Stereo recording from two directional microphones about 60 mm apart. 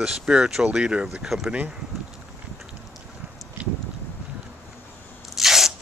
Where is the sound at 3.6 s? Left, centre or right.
Centre.